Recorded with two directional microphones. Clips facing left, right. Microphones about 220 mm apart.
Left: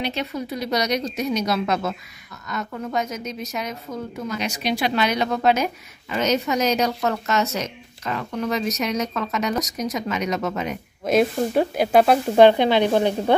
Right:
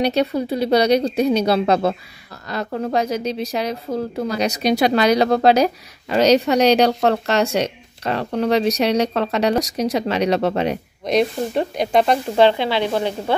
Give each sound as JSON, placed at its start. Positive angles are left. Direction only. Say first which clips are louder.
{"t": 0.0, "sound": "a woman's voice", "louder": "right 8 dB", "side_deg": -35}
{"t": 11.1, "sound": "speech", "louder": "even", "side_deg": 5}
{"t": 12.4, "sound": "speech", "louder": "left 3 dB", "side_deg": 15}